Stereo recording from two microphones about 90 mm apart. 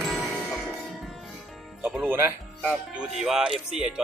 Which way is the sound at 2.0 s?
20° right (ahead or behind).